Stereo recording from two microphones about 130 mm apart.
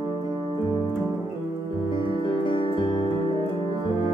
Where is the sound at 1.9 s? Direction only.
40° left (ahead or behind).